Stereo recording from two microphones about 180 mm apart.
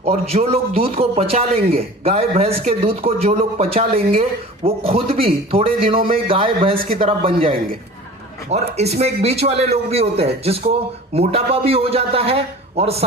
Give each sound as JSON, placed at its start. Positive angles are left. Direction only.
{"t": 0.0, "sound": "a man's voice", "side_deg": -35}